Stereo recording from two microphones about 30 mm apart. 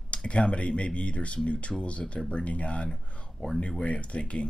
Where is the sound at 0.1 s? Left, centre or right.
Left.